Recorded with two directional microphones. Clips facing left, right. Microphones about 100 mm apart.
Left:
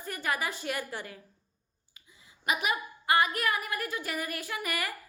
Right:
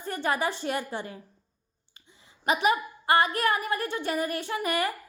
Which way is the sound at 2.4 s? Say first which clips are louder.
Right 6 dB; 35° right (ahead or behind).